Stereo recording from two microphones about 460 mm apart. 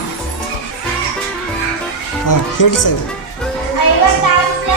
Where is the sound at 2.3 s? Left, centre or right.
Left.